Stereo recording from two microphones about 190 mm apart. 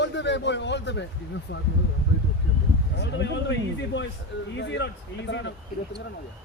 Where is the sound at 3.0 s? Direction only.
65° left (ahead or behind).